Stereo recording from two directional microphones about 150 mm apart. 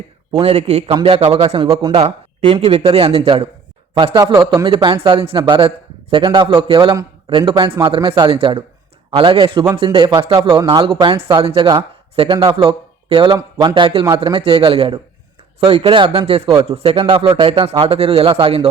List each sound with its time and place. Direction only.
0.3 s speech: 35° right (ahead or behind)
0.9 s speech: 35° right (ahead or behind)
3.9 s a man's voice: 30° right (ahead or behind)
4.6 s a man's voice: 35° right (ahead or behind)
17.7 s speech: 40° right (ahead or behind)